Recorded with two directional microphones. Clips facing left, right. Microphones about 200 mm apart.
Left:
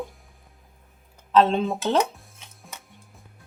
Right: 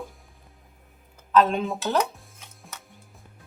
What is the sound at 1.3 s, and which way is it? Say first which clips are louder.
Speech: left 2 dB; 30° left (ahead or behind).